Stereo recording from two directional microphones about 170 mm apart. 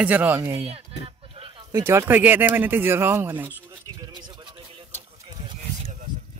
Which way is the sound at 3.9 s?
25° right (ahead or behind).